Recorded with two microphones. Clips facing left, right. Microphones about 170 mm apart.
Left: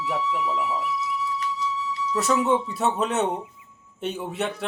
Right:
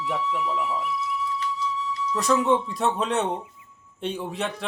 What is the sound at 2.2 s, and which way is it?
Speech, 5° left (ahead or behind).